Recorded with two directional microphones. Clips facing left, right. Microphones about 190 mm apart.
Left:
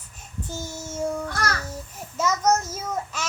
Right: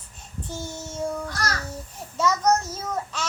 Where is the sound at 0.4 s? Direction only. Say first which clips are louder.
Even; 10° left (ahead or behind).